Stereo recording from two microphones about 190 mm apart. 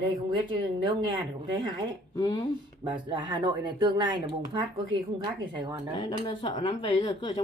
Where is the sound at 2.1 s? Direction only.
20° left (ahead or behind).